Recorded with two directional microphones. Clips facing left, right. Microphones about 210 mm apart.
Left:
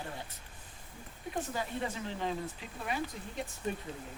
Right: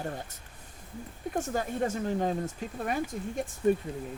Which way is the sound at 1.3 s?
45° right (ahead or behind).